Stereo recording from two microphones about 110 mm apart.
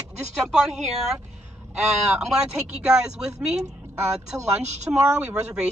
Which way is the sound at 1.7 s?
5° right (ahead or behind).